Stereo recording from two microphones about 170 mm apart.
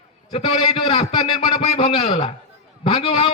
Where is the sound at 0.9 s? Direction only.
30° left (ahead or behind).